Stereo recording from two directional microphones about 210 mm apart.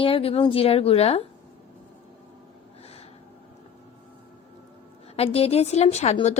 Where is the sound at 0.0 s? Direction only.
25° left (ahead or behind).